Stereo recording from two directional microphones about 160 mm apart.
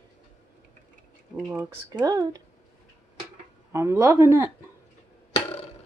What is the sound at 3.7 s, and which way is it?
Speech, 15° right (ahead or behind).